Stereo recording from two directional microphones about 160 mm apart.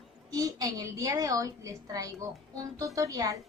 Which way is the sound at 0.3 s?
20° right (ahead or behind).